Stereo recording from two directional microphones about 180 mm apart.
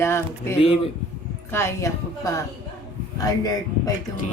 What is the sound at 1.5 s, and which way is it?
A man's voice, 15° left (ahead or behind).